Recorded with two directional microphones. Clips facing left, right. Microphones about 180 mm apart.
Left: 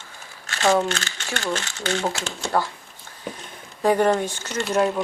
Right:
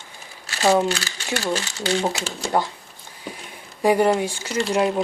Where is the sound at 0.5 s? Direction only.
10° right (ahead or behind).